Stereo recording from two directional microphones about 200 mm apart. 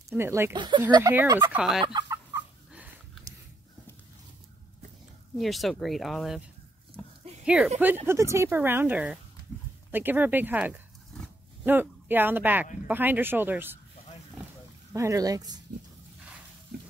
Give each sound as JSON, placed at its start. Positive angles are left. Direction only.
{"t": 0.1, "sound": "a woman's voice", "side_deg": -10}
{"t": 1.6, "sound": "speech", "side_deg": 0}
{"t": 1.9, "sound": "chicken", "side_deg": -20}
{"t": 2.3, "sound": "fowl", "side_deg": -5}
{"t": 5.4, "sound": "speech", "side_deg": 0}
{"t": 7.4, "sound": "a woman's voice", "side_deg": -5}
{"t": 14.9, "sound": "a woman's voice", "side_deg": -15}